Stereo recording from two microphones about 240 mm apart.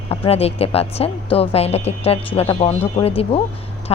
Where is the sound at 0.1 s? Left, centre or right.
Left.